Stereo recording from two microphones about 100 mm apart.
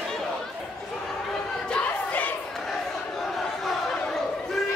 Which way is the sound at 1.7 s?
10° left (ahead or behind).